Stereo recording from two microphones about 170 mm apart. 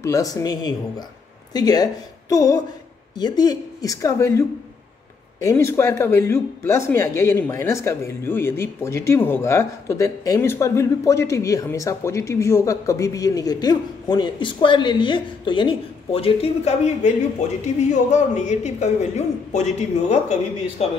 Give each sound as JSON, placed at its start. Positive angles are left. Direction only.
{"t": 0.0, "sound": "a woman's voice", "side_deg": 20}
{"t": 18.1, "sound": "speech", "side_deg": 45}